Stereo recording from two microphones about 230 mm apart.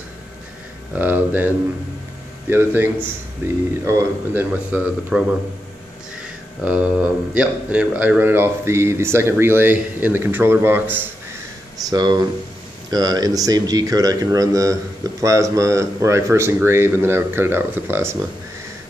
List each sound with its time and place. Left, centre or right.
0.9 s a man's voice: centre
2.5 s a man's voice: centre
6.6 s a man's voice: centre